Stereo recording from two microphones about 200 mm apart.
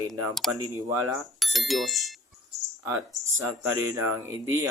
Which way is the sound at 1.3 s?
Centre (ahead or behind).